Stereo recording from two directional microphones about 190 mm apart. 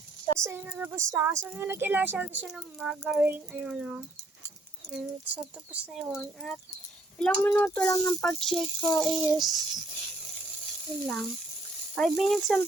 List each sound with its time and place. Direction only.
0.3 s speech: 15° right (ahead or behind)
11.0 s speech: centre (ahead or behind)